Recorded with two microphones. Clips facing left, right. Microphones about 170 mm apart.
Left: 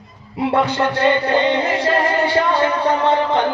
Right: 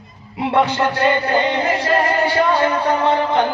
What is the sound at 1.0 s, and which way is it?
Music, 25° left (ahead or behind).